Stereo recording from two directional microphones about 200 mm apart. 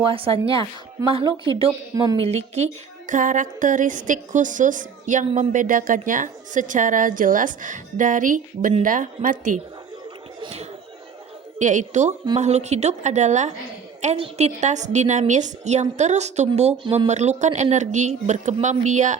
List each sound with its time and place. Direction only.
0.0 s a woman's voice: 25° right (ahead or behind)
10.4 s a woman's voice: 30° right (ahead or behind)